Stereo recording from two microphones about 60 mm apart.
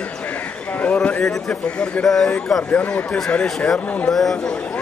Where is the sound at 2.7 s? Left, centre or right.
Left.